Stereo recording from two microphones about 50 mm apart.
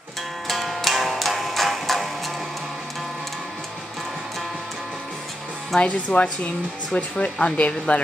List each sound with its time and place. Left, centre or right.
0.5 s music: centre
5.8 s speech: left